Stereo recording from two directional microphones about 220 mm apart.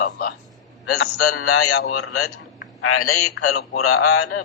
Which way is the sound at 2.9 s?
85° left.